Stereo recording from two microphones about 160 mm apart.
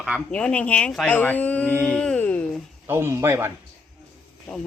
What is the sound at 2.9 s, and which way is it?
Speech, 15° right (ahead or behind).